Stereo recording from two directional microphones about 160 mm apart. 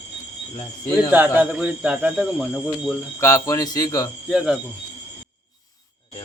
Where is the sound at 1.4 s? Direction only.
10° right (ahead or behind).